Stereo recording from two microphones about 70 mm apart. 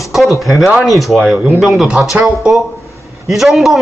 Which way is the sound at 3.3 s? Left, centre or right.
Centre.